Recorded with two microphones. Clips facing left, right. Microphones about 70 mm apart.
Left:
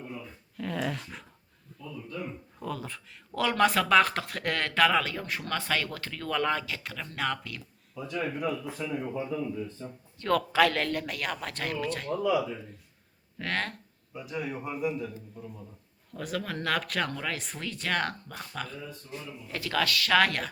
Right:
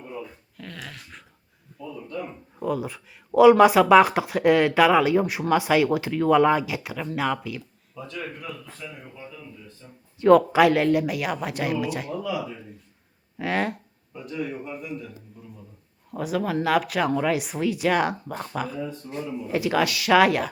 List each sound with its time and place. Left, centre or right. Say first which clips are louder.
0.5 s dog: left 11 dB; centre
1.8 s a sound: right 5 dB; centre
2.6 s speech: right 9 dB; centre
8.0 s a man's voice: left 4 dB; centre
9.8 s speech: left 7 dB; left
10.2 s speech: right 9 dB; centre
14.1 s a man's voice: right 3 dB; centre
19.1 s a man's voice: right 10 dB; right
19.5 s speech: right 6 dB; centre